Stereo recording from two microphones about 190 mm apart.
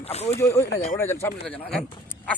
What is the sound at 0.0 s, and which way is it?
Speech, 35° left (ahead or behind).